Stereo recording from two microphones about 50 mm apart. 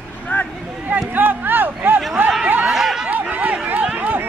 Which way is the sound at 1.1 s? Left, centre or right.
Right.